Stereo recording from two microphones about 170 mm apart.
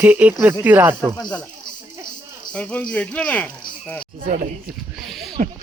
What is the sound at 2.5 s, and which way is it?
Speech, 5° left (ahead or behind).